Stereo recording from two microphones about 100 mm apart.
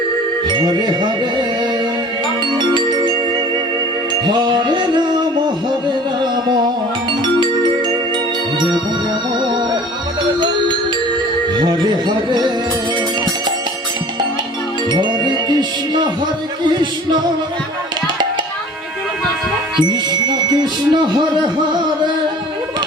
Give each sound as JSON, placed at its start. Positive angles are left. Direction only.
{"t": 0.4, "sound": "music", "side_deg": -50}
{"t": 2.7, "sound": "music", "side_deg": -50}
{"t": 4.3, "sound": "music", "side_deg": -50}
{"t": 11.6, "sound": "music", "side_deg": -45}
{"t": 14.8, "sound": "music", "side_deg": -50}
{"t": 16.7, "sound": "music", "side_deg": -45}
{"t": 19.8, "sound": "music", "side_deg": -45}